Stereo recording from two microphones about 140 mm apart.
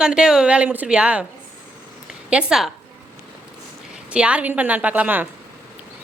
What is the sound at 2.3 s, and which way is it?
Speech, 5° right (ahead or behind).